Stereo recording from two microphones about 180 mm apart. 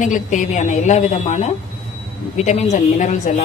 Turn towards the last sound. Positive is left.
turn(degrees=40)  # may be behind; listen again after turning